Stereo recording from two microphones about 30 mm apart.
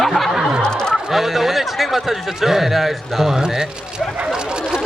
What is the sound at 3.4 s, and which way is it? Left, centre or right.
Speech, right.